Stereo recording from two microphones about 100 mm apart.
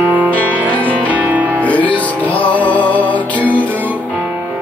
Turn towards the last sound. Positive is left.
turn(degrees=15)  # may be behind; listen again after turning